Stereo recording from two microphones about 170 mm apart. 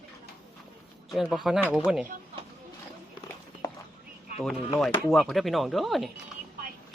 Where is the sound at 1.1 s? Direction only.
Centre (ahead or behind).